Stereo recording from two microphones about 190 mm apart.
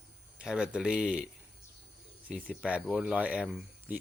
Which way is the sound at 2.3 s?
Centre (ahead or behind).